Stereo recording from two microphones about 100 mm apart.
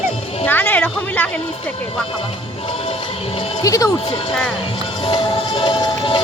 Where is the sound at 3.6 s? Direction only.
35° left (ahead or behind).